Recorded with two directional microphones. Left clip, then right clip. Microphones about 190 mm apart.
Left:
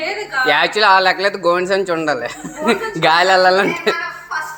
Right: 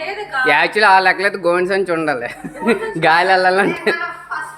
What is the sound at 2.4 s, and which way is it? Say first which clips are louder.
Speech: left 1 dB; 15° right (ahead or behind).